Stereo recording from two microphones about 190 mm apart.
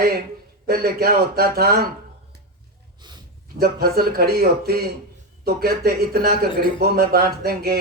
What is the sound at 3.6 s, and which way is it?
Speech, 55° right (ahead or behind).